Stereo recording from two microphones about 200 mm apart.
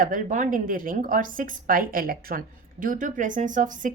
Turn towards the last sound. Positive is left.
turn(degrees=-40)  # may be behind; listen again after turning